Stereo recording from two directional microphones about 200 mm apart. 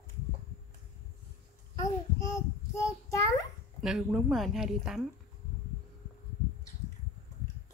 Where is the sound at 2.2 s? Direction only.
15° left (ahead or behind).